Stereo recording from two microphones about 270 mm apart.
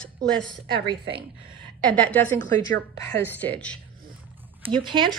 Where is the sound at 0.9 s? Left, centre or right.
Centre.